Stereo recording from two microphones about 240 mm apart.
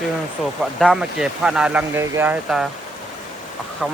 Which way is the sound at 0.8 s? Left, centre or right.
Centre.